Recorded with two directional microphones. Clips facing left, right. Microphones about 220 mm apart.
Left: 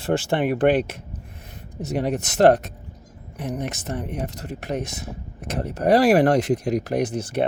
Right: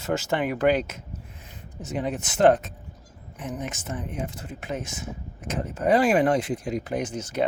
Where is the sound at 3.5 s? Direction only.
40° left (ahead or behind).